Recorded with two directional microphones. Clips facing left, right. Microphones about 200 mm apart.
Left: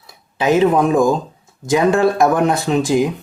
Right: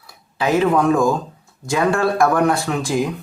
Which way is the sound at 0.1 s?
20° left (ahead or behind).